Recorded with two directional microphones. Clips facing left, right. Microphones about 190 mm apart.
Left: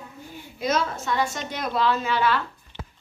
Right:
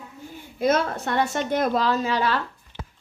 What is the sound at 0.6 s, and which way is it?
A woman's voice, 55° right (ahead or behind).